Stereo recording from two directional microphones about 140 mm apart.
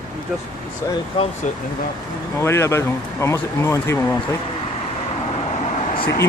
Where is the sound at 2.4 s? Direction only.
20° left (ahead or behind).